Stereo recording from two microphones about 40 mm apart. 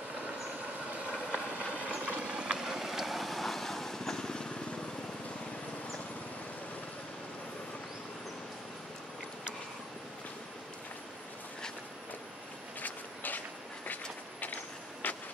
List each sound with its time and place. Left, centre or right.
0.7 s vehicle: right; by 4.5 s centre
12.8 s a sound: left
14.4 s vehicle: left